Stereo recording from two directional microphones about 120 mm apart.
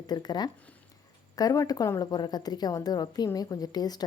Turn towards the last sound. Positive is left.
turn(degrees=35)  # may be behind; listen again after turning